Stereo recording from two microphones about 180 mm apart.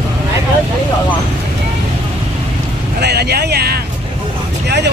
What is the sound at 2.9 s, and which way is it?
Speech, 65° right (ahead or behind).